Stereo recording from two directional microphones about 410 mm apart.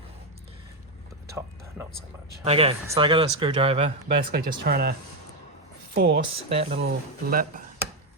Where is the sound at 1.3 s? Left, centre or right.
Centre; by 4.9 s right.